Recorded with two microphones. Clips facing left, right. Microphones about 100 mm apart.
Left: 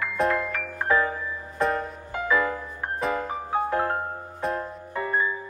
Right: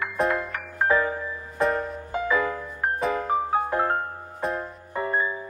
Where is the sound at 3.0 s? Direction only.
Centre (ahead or behind).